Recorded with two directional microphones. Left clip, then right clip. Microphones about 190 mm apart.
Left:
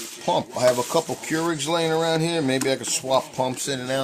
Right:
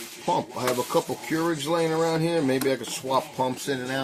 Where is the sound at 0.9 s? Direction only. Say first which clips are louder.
Left 2 dB; 65° left (ahead or behind).